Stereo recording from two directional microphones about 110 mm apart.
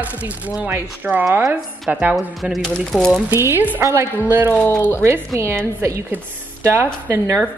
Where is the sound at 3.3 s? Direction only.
20° right (ahead or behind).